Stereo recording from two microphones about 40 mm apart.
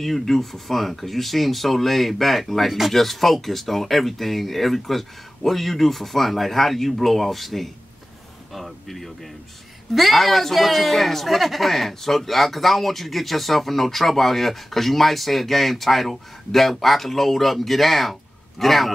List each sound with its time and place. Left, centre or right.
0.0 s speech: centre